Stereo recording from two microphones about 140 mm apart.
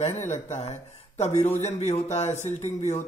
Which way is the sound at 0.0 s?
50° left (ahead or behind).